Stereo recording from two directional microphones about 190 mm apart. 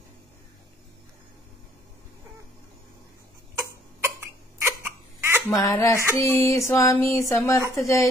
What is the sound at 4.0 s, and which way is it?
Hiccup, 10° right (ahead or behind).